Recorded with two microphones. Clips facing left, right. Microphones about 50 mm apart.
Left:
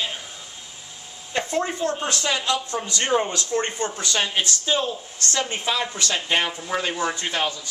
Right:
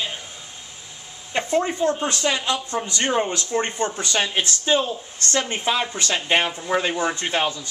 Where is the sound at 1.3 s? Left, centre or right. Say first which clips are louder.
Right 3 dB; right.